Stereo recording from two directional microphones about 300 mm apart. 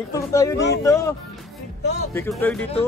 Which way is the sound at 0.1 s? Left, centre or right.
Centre.